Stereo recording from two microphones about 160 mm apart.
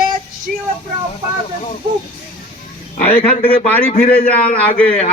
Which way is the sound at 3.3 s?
70° left (ahead or behind).